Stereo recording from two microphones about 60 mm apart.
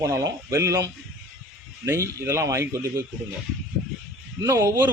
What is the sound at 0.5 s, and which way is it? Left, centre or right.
Speech, right.